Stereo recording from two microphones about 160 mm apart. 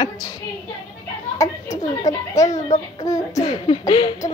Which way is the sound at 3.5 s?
30° left (ahead or behind).